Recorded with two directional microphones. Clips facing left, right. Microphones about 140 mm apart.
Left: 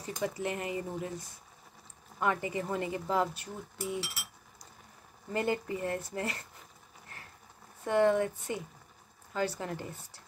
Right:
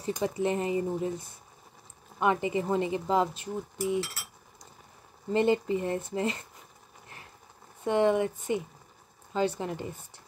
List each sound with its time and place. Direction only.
0.2 s speech: 25° right (ahead or behind)
5.3 s speech: 25° right (ahead or behind)
7.8 s speech: 20° right (ahead or behind)